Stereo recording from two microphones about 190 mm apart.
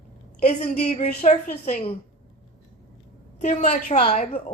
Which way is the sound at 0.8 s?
35° left (ahead or behind).